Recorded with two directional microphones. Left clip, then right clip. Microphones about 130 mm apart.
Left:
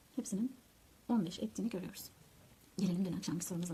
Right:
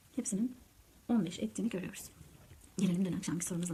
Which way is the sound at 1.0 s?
20° left (ahead or behind).